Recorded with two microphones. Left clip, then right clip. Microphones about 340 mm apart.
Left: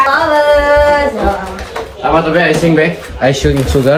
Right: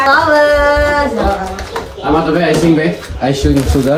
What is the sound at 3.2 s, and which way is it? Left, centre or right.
Speech, left.